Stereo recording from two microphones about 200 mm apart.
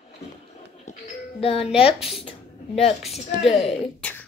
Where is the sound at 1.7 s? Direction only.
5° right (ahead or behind).